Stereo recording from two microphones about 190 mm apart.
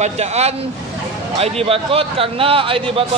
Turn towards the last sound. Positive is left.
turn(degrees=-30)  # may be behind; listen again after turning